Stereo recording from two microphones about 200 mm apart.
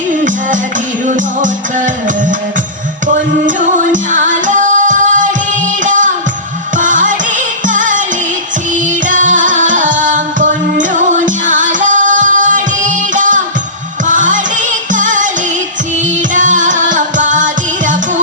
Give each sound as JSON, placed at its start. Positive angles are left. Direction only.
{"t": 1.0, "sound": "music", "side_deg": -40}
{"t": 3.9, "sound": "music", "side_deg": -40}
{"t": 9.0, "sound": "music", "side_deg": -40}
{"t": 16.3, "sound": "music", "side_deg": -40}